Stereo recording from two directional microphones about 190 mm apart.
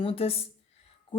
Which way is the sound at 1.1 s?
25° left (ahead or behind).